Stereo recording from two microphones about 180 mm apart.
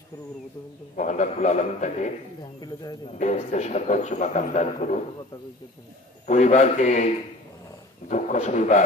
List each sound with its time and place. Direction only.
0.9 s a man's voice: 40° left (ahead or behind)
2.6 s speech: 20° left (ahead or behind)
3.2 s a man's voice: 40° left (ahead or behind)
6.2 s a man's voice: 40° left (ahead or behind)
8.1 s a man's voice: 40° left (ahead or behind)